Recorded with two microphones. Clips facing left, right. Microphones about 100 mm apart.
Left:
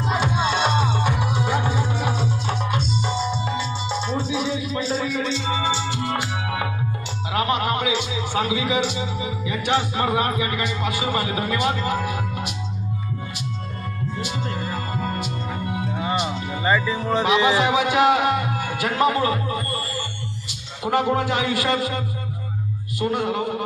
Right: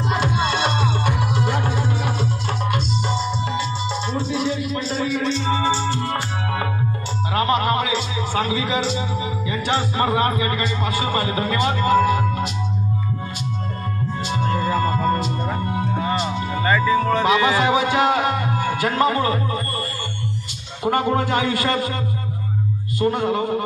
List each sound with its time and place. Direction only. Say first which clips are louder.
0.0 s music: right 1 dB; centre (ahead or behind)
5.2 s music: right 3 dB; 45° right (ahead or behind)
5.9 s music: right 2 dB; 15° left (ahead or behind)
7.3 s music: right 3 dB; 10° left (ahead or behind)
8.4 s a man's voice: even; 10° left (ahead or behind)
14.3 s music: right 7 dB; 50° right (ahead or behind)
15.7 s music: right 1 dB; 10° left (ahead or behind)
17.2 s music: right 1 dB; 5° left (ahead or behind)
20.8 s a man's voice: right 1 dB; 10° left (ahead or behind)
23.0 s music: right 3 dB; 5° left (ahead or behind)